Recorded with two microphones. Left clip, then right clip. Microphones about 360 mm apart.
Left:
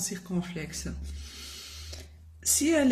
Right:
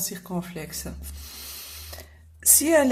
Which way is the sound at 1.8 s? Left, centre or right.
Centre.